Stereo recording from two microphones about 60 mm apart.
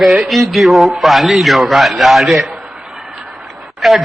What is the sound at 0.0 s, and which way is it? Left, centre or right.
Speech, centre.